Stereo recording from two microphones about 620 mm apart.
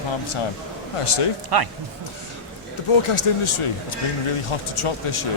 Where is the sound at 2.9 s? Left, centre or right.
Left.